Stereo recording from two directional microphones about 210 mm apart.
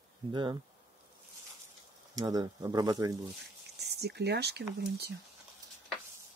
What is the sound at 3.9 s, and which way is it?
Speech, 50° right (ahead or behind).